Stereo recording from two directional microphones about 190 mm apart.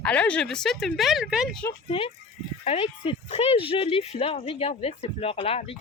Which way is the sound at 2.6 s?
30° left (ahead or behind).